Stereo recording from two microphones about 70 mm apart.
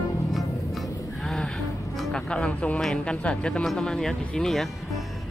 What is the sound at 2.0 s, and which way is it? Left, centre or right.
Speech, centre.